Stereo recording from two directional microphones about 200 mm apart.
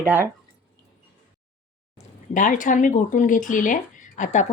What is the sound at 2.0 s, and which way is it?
Speech, 40° left (ahead or behind).